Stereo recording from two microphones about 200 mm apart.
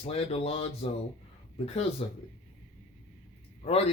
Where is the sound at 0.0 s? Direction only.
30° left (ahead or behind).